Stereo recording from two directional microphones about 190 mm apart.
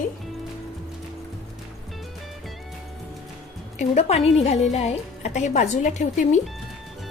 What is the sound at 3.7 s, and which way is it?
A woman's voice, 35° left (ahead or behind).